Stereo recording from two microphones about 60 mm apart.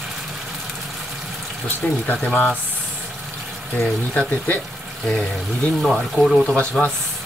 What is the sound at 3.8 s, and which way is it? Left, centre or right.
Speech, left.